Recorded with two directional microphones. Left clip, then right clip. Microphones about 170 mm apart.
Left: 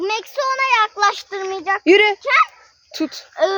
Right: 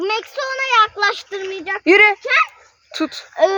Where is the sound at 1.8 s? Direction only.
40° left (ahead or behind).